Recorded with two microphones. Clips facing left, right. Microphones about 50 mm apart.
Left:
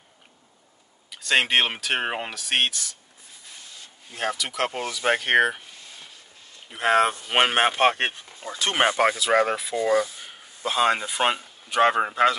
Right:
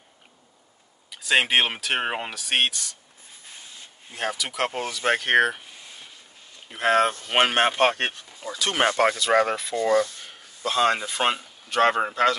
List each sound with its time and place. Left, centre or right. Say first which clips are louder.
1.1 s speech: even; centre
4.1 s speech: left 1 dB; centre
7.9 s speech: left 1 dB; centre
8.4 s speech: left 1 dB; left
8.8 s speech: even; centre